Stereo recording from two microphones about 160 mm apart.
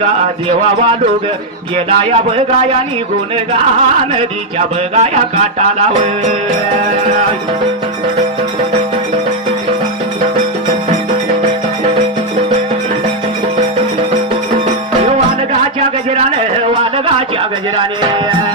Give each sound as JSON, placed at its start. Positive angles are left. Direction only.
{"t": 1.7, "sound": "speech", "side_deg": -40}
{"t": 4.9, "sound": "music", "side_deg": -45}
{"t": 7.0, "sound": "music", "side_deg": -45}